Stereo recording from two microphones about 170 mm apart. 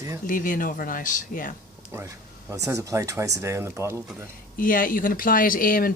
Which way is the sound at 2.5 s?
15° right (ahead or behind).